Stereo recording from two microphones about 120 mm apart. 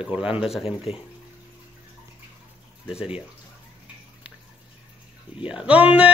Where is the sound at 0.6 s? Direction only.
55° left (ahead or behind).